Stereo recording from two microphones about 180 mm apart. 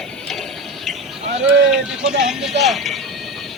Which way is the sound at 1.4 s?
5° right (ahead or behind).